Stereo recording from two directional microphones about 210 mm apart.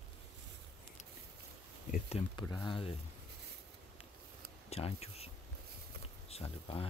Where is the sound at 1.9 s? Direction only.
30° left (ahead or behind).